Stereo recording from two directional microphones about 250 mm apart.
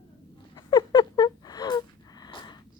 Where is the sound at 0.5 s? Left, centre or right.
Centre.